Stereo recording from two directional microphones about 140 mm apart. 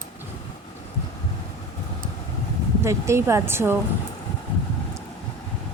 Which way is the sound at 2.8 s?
20° right (ahead or behind).